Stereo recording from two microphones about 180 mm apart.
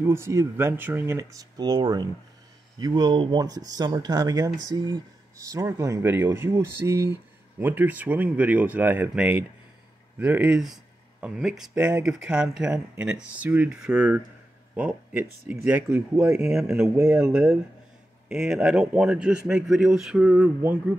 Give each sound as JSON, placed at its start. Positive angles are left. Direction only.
{"t": 0.0, "sound": "speech", "side_deg": -15}